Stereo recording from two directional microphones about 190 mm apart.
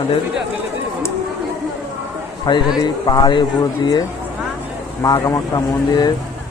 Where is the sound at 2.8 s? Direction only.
20° left (ahead or behind).